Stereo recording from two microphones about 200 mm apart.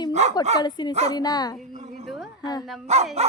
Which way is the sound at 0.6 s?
20° left (ahead or behind).